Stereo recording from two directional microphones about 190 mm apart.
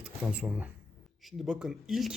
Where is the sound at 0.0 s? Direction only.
5° right (ahead or behind).